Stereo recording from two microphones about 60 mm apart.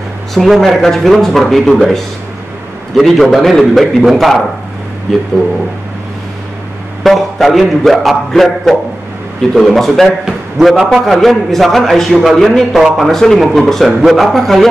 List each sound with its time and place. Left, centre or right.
0.3 s speech: centre
7.0 s a man's voice: centre